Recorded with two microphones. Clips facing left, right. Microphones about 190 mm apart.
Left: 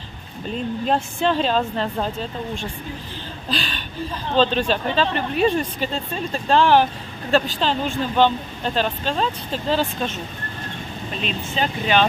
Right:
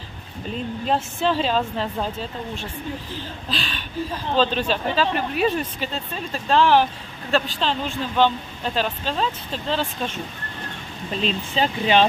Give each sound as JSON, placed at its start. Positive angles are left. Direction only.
{"t": 0.8, "sound": "speech", "side_deg": -5}
{"t": 11.2, "sound": "speech", "side_deg": -30}